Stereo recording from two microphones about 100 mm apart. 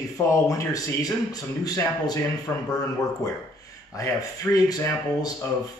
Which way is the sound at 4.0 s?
35° left (ahead or behind).